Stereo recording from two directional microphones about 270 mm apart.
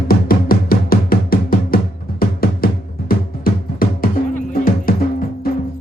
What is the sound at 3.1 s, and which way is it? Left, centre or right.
Drum, left.